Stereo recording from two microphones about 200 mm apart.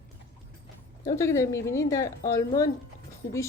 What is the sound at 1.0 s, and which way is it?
Speech, 15° left (ahead or behind).